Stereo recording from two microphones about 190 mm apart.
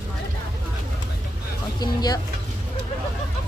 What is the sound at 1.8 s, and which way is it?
Speech, 20° left (ahead or behind).